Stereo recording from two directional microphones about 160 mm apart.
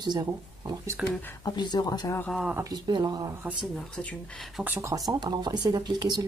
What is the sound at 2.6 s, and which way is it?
Speech, 25° right (ahead or behind).